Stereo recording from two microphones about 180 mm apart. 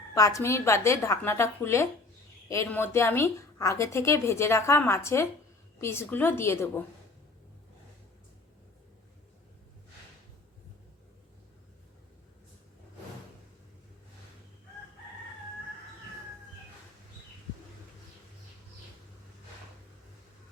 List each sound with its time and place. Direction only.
0.1 s a woman's voice: 15° left (ahead or behind)